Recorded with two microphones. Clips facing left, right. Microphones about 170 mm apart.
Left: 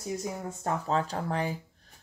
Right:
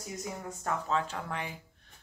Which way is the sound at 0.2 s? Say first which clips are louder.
Left 4 dB; 35° left (ahead or behind).